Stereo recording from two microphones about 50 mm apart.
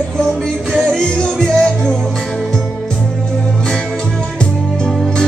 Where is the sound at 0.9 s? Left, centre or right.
Centre.